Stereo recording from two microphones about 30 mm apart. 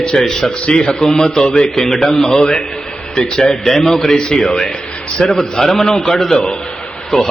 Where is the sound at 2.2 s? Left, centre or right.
Left.